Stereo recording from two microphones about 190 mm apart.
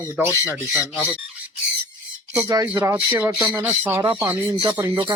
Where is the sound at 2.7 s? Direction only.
10° right (ahead or behind).